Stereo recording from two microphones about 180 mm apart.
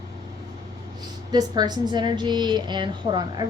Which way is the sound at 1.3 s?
25° right (ahead or behind).